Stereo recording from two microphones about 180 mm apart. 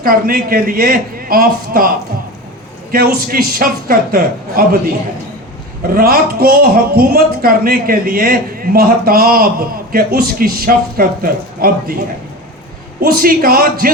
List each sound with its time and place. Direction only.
0.0 s speech: 55° right (ahead or behind)
2.9 s speech: 55° right (ahead or behind)
5.9 s speech: 55° right (ahead or behind)
13.0 s speech: 55° right (ahead or behind)